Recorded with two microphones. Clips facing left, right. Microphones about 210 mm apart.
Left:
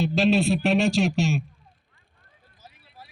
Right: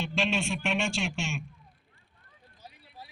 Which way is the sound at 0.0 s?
40° left (ahead or behind).